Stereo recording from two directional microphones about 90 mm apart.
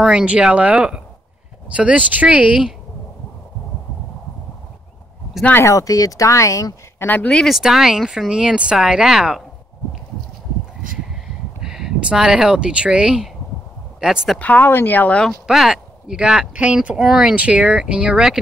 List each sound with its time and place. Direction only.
0.0 s speech: 10° right (ahead or behind)
5.6 s speech: 35° left (ahead or behind)
7.1 s speech: 20° left (ahead or behind)
7.3 s speech: centre (ahead or behind)
11.6 s speech: 5° right (ahead or behind)
14.4 s speech: 20° left (ahead or behind)
15.4 s speech: 5° right (ahead or behind)